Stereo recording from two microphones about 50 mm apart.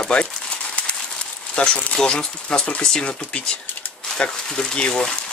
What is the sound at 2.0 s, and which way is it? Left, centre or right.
Speech, centre.